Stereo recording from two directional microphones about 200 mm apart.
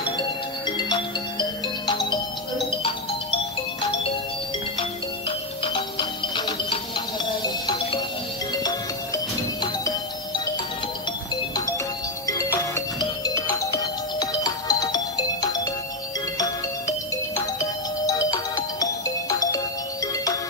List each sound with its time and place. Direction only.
0.7 s music: 20° left (ahead or behind)
5.6 s music: 25° left (ahead or behind)
12.3 s music: 15° left (ahead or behind)